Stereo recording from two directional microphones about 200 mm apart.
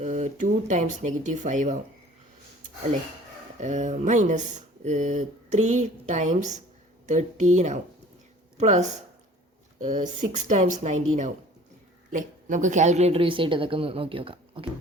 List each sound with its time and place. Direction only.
0.0 s speech: 35° right (ahead or behind)
3.6 s speech: 35° right (ahead or behind)
12.1 s a woman's voice: 40° right (ahead or behind)